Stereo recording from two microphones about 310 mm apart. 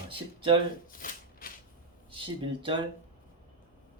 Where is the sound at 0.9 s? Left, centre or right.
Left.